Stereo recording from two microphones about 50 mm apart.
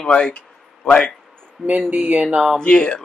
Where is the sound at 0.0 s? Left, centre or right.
Centre.